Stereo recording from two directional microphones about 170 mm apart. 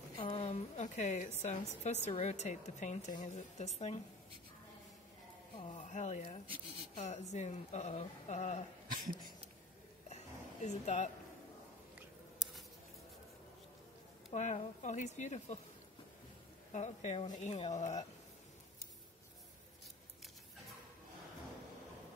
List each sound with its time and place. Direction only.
0.2 s a sound: 35° left (ahead or behind)
1.4 s a woman's voice: 45° left (ahead or behind)
5.7 s speech: 45° left (ahead or behind)
6.4 s speech: 30° right (ahead or behind)
7.0 s a woman's voice: 40° left (ahead or behind)
10.0 s music: 40° left (ahead or behind)
14.3 s a woman's voice: 45° left (ahead or behind)
16.7 s a woman's voice: 45° left (ahead or behind)